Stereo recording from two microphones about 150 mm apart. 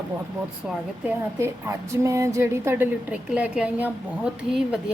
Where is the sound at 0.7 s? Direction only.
10° right (ahead or behind).